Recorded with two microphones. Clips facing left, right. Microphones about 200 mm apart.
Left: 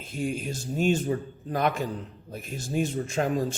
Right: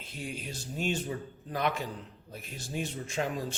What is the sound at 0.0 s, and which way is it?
Speech, 45° left (ahead or behind).